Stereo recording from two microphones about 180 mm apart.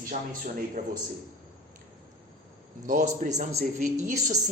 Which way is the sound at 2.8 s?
45° right (ahead or behind).